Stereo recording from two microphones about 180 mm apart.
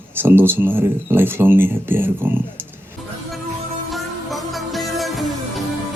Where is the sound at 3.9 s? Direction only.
Centre (ahead or behind).